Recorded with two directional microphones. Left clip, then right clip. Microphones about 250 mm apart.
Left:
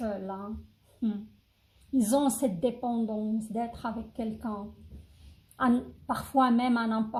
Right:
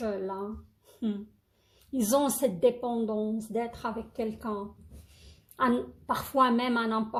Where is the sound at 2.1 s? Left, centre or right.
Right.